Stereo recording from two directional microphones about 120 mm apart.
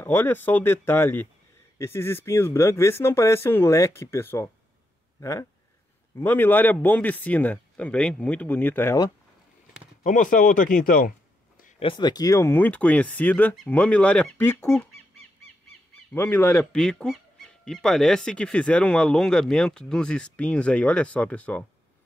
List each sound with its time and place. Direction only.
0.0 s speech: 15° left (ahead or behind)
10.0 s speech: 90° left
11.8 s speech: 40° left (ahead or behind); by 14.5 s 10° left (ahead or behind)
16.1 s speech: 15° left (ahead or behind)
16.7 s speech: 5° left (ahead or behind)